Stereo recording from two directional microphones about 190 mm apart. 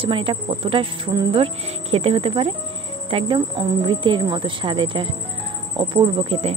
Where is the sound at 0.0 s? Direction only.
30° right (ahead or behind).